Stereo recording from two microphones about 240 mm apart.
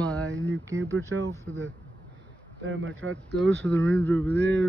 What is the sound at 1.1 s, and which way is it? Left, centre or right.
Speech, right.